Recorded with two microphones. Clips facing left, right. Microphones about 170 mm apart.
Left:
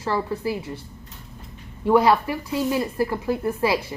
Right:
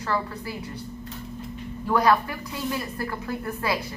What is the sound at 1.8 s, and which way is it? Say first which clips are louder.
A woman's voice: left 4 dB; 25° left (ahead or behind).